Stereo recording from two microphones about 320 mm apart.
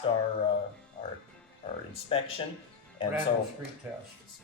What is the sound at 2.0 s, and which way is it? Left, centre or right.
Speech, centre.